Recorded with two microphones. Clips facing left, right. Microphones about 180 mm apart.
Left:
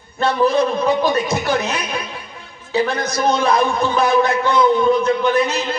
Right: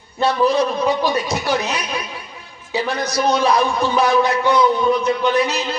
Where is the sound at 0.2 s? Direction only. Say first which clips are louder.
Left 1 dB; 55° left (ahead or behind).